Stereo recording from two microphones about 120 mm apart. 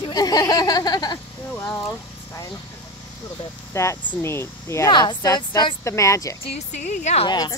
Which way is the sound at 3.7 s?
20° left (ahead or behind).